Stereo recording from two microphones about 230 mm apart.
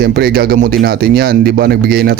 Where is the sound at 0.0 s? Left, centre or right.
Right.